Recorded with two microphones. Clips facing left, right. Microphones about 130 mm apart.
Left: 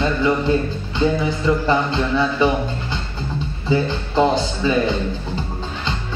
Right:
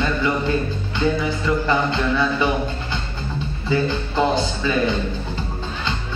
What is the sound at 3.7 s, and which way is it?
A man's voice, 20° left (ahead or behind).